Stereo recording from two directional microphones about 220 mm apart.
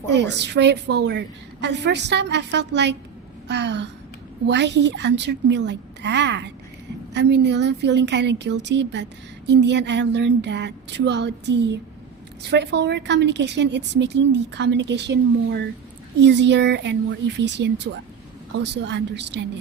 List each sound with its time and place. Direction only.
0.1 s a woman's voice: 50° right (ahead or behind)
17.9 s speech: 65° right (ahead or behind)
18.6 s a woman's voice: 50° right (ahead or behind)